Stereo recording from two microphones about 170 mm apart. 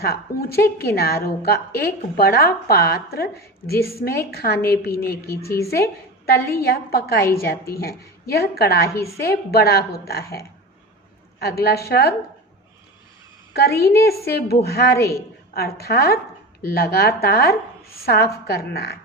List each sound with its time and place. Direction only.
0.0 s a woman's voice: 65° left (ahead or behind)
8.9 s a woman's voice: 15° left (ahead or behind)
9.2 s a woman's voice: 65° left (ahead or behind)
11.6 s a woman's voice: 65° left (ahead or behind)
13.5 s a woman's voice: 65° left (ahead or behind)
14.9 s a woman's voice: 15° left (ahead or behind)
15.5 s a woman's voice: 65° left (ahead or behind)